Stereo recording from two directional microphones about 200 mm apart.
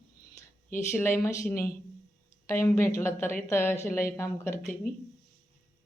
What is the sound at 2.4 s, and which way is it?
Speech, 15° left (ahead or behind).